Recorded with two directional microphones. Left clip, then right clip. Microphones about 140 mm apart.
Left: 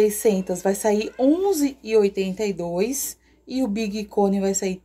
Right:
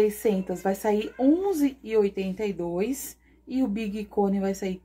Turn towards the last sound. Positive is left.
turn(degrees=5)  # may be behind; listen again after turning